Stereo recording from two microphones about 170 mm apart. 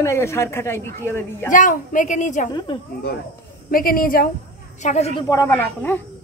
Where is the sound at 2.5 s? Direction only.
30° left (ahead or behind).